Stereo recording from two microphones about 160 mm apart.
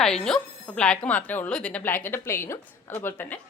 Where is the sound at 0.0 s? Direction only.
5° left (ahead or behind).